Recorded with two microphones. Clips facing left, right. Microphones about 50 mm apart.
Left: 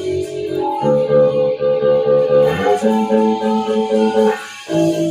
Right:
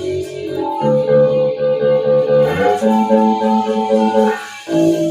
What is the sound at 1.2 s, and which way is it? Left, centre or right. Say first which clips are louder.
Music: even; left.